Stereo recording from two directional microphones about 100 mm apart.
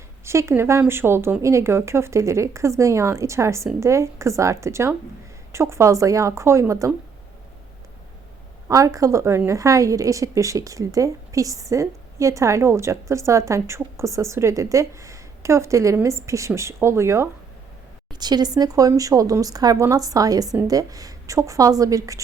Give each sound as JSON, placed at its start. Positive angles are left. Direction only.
{"t": 0.3, "sound": "a woman's voice", "side_deg": -25}
{"t": 8.6, "sound": "a woman's voice", "side_deg": -35}
{"t": 18.1, "sound": "a woman's voice", "side_deg": -45}